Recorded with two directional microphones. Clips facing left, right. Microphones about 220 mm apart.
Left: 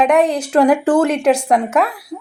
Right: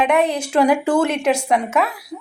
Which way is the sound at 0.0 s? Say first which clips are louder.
Left 3 dB; 10° right (ahead or behind).